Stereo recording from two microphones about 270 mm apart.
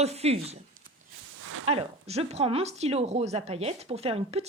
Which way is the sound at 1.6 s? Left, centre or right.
Right.